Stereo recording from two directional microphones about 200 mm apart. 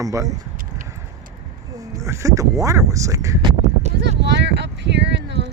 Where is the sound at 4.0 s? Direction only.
60° right (ahead or behind).